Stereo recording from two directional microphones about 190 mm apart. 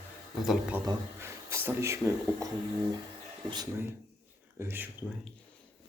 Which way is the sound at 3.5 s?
20° right (ahead or behind).